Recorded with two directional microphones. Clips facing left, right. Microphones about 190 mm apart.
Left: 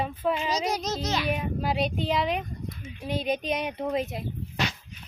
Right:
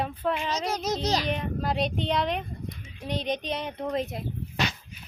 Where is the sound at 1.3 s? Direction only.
5° left (ahead or behind).